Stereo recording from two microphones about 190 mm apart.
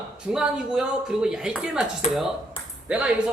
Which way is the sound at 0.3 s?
5° right (ahead or behind).